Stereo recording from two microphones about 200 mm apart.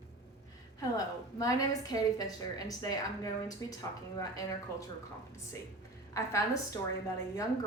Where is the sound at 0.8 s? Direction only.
15° left (ahead or behind).